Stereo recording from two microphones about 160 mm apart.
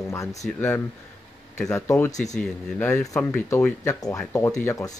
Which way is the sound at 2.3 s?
5° left (ahead or behind).